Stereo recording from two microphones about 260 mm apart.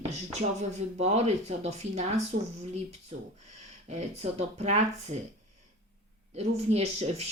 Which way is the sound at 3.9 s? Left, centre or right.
Right.